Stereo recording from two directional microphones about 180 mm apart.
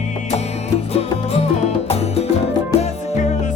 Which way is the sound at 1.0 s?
35° left (ahead or behind).